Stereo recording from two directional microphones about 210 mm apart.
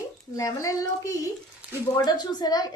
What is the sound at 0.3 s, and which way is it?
A woman's voice, 15° left (ahead or behind).